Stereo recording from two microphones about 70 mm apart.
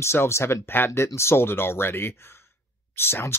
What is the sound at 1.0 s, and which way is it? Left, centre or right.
Speech, left.